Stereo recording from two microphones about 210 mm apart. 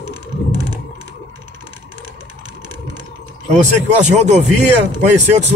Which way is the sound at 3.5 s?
35° right (ahead or behind).